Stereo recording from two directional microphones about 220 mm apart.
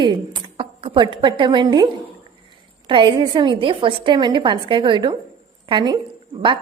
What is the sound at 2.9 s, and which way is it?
A woman's voice, 20° right (ahead or behind).